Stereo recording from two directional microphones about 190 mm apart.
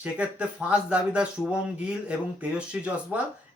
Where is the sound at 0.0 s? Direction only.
5° right (ahead or behind).